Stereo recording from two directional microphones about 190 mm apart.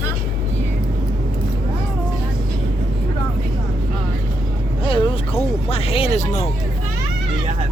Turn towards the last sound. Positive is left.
turn(degrees=30)  # may be behind; listen again after turning